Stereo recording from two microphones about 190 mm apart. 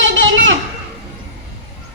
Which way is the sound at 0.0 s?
80° right.